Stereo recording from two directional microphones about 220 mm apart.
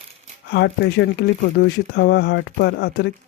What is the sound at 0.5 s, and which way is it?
Speech, 50° left (ahead or behind).